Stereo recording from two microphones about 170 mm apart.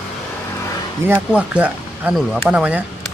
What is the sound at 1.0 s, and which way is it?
Speech, 10° right (ahead or behind).